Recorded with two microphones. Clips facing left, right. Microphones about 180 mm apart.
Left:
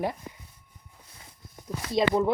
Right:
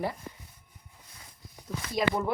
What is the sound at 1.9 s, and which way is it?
Speech, 25° left (ahead or behind).